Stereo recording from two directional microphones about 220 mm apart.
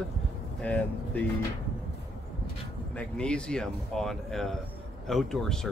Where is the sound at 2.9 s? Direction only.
5° left (ahead or behind).